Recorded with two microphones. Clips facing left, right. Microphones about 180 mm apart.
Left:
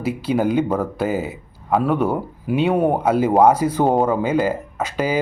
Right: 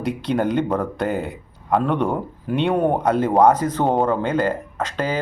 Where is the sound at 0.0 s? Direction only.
5° left (ahead or behind).